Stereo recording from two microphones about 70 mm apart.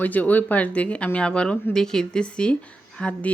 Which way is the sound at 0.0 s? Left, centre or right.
Left.